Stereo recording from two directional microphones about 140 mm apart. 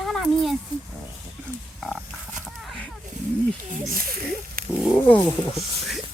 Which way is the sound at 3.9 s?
90° right.